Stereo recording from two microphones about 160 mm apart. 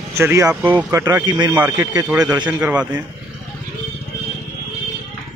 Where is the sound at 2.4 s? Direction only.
5° right (ahead or behind).